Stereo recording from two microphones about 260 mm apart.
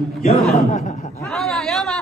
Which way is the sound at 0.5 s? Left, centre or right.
Left.